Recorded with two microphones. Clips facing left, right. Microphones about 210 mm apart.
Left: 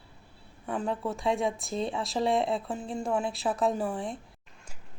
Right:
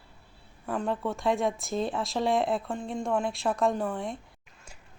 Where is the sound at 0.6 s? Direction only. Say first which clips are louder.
Right 1 dB; centre (ahead or behind).